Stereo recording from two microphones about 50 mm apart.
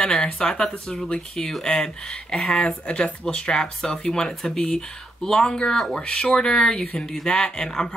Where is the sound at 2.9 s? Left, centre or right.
Centre.